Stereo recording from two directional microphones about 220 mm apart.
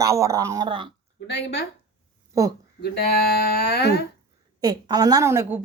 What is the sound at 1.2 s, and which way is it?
Speech, 50° left (ahead or behind).